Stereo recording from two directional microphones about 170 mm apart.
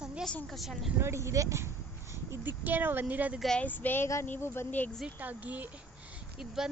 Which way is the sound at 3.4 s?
5° left (ahead or behind).